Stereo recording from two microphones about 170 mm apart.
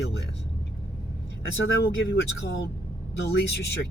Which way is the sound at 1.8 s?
75° left (ahead or behind).